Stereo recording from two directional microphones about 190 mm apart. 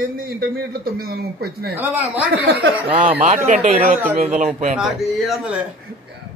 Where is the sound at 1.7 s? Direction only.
10° right (ahead or behind).